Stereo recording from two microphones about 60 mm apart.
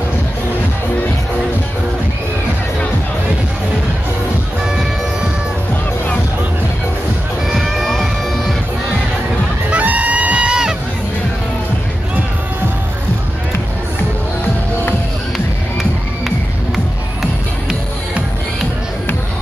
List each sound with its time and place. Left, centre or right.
7.4 s music: centre
9.7 s music: right
15.3 s music: centre